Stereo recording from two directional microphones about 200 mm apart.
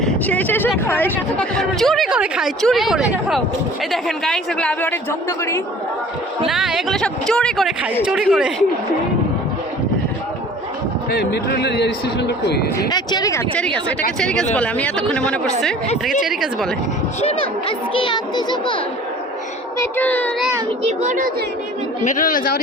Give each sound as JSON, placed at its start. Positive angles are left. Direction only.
{"t": 0.0, "sound": "speech", "side_deg": 10}
{"t": 6.4, "sound": "speech", "side_deg": 0}
{"t": 11.1, "sound": "a man's voice", "side_deg": 55}
{"t": 12.9, "sound": "speech", "side_deg": 20}
{"t": 17.2, "sound": "a child's voice", "side_deg": 30}
{"t": 19.8, "sound": "speech", "side_deg": 10}
{"t": 21.0, "sound": "speech", "side_deg": -40}
{"t": 22.0, "sound": "speech", "side_deg": 40}